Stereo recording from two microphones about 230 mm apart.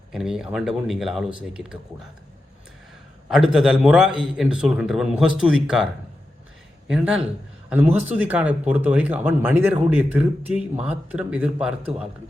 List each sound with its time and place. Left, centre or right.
0.1 s a man's voice: centre
3.2 s a man's voice: centre
7.9 s speech: right
8.3 s a man's voice: centre